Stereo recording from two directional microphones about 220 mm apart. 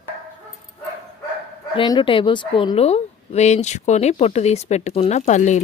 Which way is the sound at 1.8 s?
20° left (ahead or behind).